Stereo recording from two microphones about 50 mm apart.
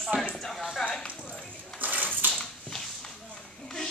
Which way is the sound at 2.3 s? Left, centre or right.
Centre.